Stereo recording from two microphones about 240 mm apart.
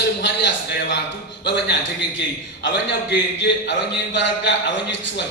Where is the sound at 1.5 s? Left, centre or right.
Left.